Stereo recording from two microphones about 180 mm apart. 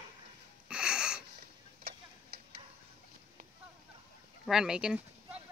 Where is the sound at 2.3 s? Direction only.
60° right (ahead or behind).